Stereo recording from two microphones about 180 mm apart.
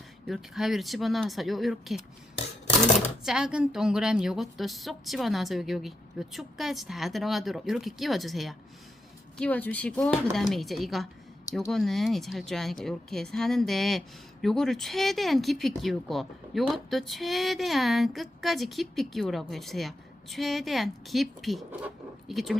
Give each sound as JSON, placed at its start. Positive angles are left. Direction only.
{"t": 0.3, "sound": "speech", "side_deg": 0}
{"t": 3.2, "sound": "speech", "side_deg": -5}